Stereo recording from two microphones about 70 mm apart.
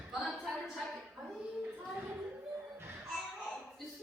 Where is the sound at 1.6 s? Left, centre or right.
Right.